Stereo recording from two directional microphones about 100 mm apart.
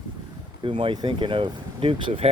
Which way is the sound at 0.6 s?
60° right (ahead or behind).